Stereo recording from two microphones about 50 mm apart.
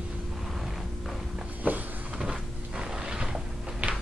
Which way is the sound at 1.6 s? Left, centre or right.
Right.